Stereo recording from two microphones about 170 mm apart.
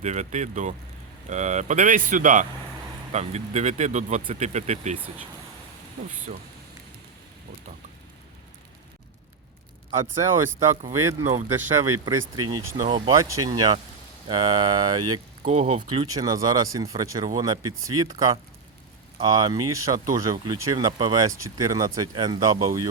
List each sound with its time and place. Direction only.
0.0 s speech: 45° right (ahead or behind)
10.2 s speech: 15° right (ahead or behind)
15.4 s speech: 40° right (ahead or behind)
16.0 s speech: 20° right (ahead or behind)